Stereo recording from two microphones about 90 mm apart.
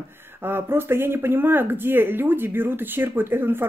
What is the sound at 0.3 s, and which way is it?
Speech, 25° right (ahead or behind).